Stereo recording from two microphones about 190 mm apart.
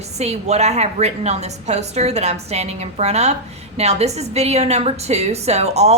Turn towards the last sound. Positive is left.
turn(degrees=-35)  # may be behind; listen again after turning